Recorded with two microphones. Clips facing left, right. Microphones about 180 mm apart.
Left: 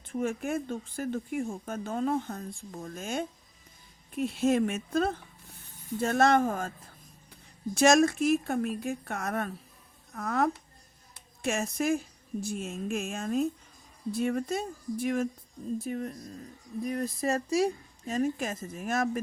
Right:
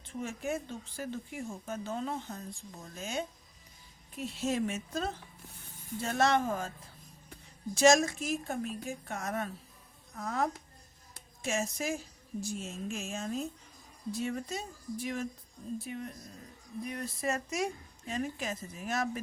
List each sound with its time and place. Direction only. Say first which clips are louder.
0.1 s a woman's voice: left 5 dB; 55° left (ahead or behind)
7.8 s a woman's voice: left 3 dB; 60° left (ahead or behind)
15.8 s speech: left 6 dB; 40° left (ahead or behind)